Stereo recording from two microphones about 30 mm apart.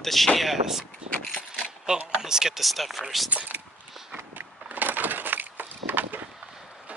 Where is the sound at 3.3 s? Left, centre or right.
Right.